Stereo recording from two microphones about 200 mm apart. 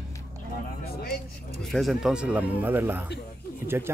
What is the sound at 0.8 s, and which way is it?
Speech, 50° left (ahead or behind).